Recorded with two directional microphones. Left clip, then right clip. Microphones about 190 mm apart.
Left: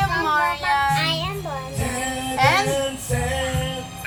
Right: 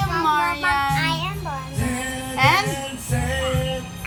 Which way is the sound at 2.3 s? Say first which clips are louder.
Even; 10° right (ahead or behind).